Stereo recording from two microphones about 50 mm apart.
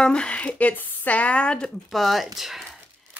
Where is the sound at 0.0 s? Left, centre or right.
Left.